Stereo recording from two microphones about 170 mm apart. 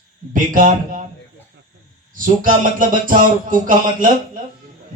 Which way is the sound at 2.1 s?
50° right (ahead or behind).